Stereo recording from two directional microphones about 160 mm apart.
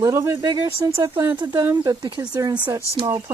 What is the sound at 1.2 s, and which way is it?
Speech, 15° right (ahead or behind).